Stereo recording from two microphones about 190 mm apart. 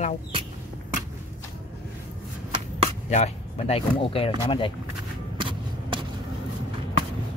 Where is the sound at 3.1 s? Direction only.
35° left (ahead or behind).